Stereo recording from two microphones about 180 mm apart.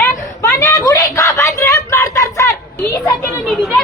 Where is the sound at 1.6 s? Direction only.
15° left (ahead or behind).